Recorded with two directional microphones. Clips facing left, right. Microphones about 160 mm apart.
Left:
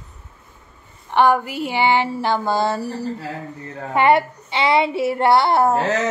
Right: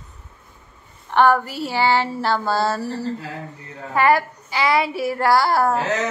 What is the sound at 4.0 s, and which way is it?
A woman's voice, 25° left (ahead or behind).